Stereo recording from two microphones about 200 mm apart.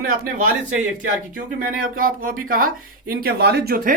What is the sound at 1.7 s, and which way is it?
Speech, 45° right (ahead or behind).